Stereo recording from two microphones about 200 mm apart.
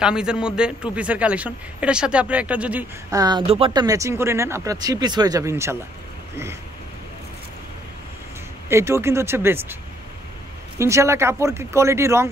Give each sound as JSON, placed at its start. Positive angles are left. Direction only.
{"t": 0.0, "sound": "a man's voice", "side_deg": -5}
{"t": 3.2, "sound": "speech", "side_deg": -20}
{"t": 8.6, "sound": "speech", "side_deg": -15}
{"t": 10.8, "sound": "speech", "side_deg": -15}